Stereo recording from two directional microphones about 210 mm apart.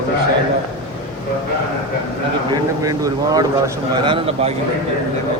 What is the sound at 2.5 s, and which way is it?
A man's voice, 15° right (ahead or behind).